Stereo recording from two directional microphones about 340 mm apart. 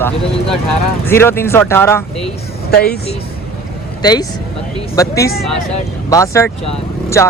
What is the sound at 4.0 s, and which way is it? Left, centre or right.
Speech, centre.